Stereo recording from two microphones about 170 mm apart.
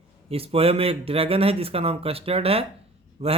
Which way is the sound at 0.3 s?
35° right (ahead or behind).